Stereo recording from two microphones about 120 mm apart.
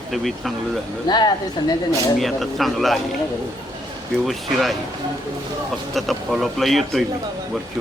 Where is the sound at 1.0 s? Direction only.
35° left (ahead or behind).